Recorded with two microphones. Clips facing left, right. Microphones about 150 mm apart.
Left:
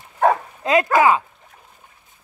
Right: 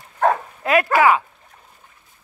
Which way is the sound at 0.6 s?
20° left (ahead or behind).